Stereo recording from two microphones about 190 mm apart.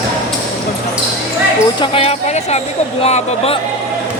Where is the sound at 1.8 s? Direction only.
30° left (ahead or behind).